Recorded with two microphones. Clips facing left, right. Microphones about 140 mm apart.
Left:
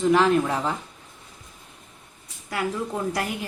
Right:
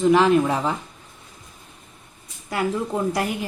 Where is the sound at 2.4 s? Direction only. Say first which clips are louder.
Right 3 dB; 25° right (ahead or behind).